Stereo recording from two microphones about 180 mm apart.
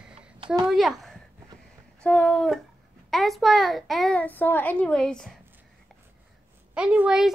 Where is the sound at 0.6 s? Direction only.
Centre (ahead or behind).